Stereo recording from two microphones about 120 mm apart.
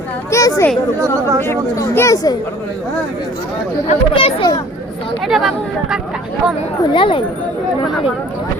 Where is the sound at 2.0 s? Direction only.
30° left (ahead or behind).